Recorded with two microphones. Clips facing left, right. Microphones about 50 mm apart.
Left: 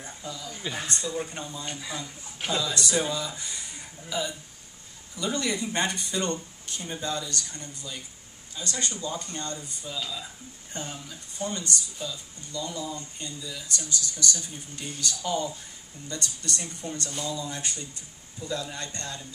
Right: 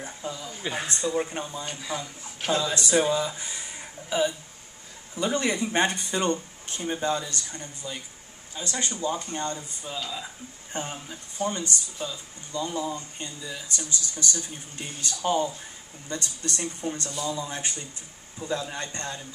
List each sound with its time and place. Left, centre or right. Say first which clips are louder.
0.0 s speech: right 3 dB; right
0.6 s speech: right 2 dB; centre
1.7 s speech: right 3 dB; centre
2.5 s speech: right 4 dB; right
6.3 s speech: right 2 dB; right